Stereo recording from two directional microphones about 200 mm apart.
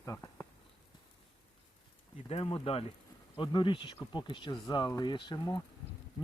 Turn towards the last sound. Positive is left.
turn(degrees=20)  # may be behind; listen again after turning